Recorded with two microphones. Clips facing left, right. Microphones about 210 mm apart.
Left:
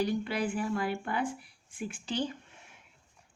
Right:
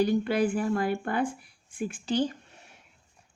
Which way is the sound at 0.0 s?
45° right (ahead or behind).